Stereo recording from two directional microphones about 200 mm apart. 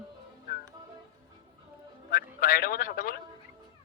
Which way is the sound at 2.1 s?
45° left (ahead or behind).